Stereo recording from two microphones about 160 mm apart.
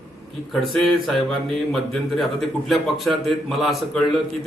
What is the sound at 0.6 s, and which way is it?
A man's voice, centre (ahead or behind).